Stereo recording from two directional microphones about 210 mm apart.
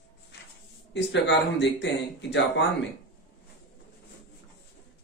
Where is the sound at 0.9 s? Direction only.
55° left (ahead or behind).